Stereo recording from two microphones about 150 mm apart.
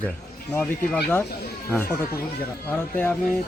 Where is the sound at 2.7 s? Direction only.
15° left (ahead or behind).